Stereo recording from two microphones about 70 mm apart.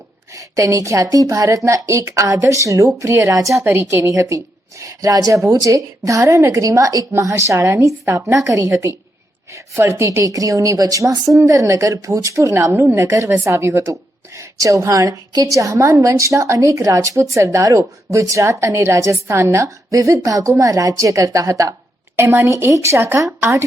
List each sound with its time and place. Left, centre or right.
0.3 s a woman's voice: right
3.6 s a woman's voice: right
3.8 s a woman's voice: right
6.7 s a woman's voice: right
8.1 s a woman's voice: right
9.5 s a woman's voice: right
22.1 s a woman's voice: right